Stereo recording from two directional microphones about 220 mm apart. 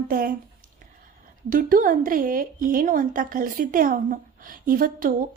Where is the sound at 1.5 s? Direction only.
40° right (ahead or behind).